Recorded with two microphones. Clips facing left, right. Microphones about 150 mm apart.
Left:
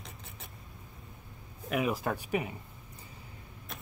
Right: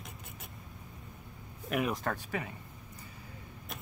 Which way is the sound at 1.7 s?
5° left (ahead or behind).